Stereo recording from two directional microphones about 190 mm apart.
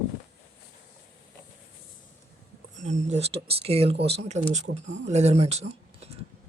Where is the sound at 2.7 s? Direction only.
40° right (ahead or behind).